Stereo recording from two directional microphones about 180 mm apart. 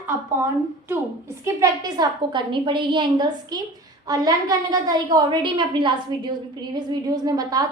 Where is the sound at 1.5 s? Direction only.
20° right (ahead or behind).